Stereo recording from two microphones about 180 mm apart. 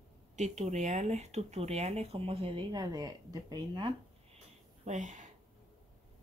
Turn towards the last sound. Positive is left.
turn(degrees=-45)  # may be behind; listen again after turning